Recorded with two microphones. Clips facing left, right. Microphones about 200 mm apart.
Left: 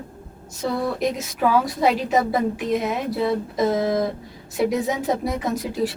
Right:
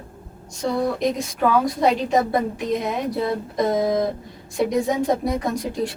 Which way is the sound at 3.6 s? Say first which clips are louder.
Right 1 dB; centre (ahead or behind).